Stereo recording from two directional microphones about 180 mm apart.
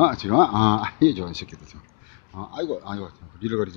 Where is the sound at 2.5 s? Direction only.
30° left (ahead or behind).